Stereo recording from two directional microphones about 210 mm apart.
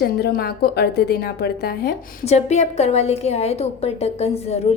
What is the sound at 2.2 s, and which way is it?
A woman's voice, 30° left (ahead or behind).